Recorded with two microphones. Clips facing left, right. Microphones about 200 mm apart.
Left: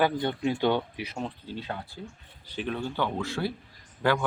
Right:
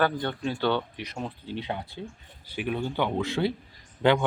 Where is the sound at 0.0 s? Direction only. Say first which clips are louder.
Left 1 dB; 15° left (ahead or behind).